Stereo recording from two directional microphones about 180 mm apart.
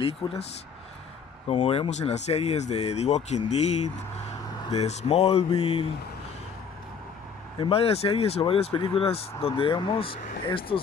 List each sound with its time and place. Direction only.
0.0 s speech: 35° left (ahead or behind)
1.5 s speech: 35° left (ahead or behind)
7.5 s speech: 30° left (ahead or behind)